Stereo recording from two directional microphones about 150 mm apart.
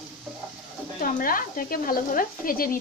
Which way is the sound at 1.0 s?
70° left (ahead or behind).